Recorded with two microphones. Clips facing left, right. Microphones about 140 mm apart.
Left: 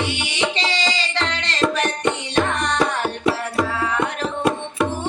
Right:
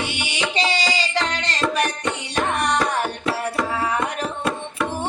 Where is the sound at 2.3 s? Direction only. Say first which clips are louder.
Right 1 dB; 10° right (ahead or behind).